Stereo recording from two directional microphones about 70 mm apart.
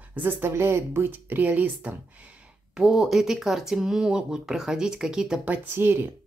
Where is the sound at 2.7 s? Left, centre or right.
Centre.